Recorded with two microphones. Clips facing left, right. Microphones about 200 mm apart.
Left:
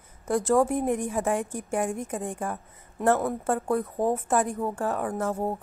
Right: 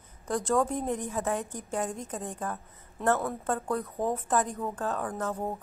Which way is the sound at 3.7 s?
25° left (ahead or behind).